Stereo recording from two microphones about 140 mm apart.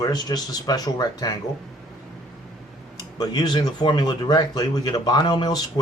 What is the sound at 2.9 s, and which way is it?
Speech, 30° left (ahead or behind).